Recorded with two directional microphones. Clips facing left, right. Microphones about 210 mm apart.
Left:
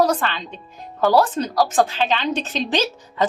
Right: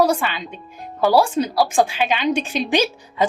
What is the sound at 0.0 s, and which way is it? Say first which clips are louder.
A woman's voice: right 1 dB; 10° right (ahead or behind).